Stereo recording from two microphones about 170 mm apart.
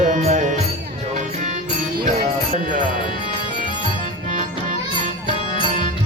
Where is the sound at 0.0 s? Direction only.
40° right (ahead or behind).